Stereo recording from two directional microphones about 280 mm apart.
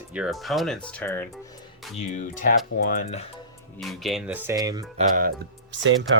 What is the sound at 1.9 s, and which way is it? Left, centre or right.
Speech, left.